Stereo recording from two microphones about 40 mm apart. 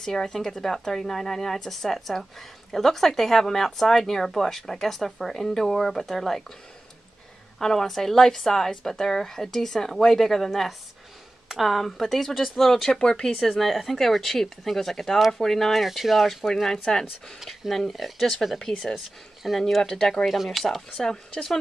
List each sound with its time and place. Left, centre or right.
0.0 s speech: centre
7.5 s speech: centre
13.0 s speech: centre
13.6 s speech: centre
15.7 s speech: centre
19.6 s speech: centre
20.6 s speech: centre
21.0 s speech: centre